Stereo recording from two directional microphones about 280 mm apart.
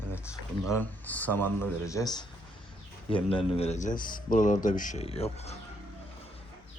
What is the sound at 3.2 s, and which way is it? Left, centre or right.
Speech, centre.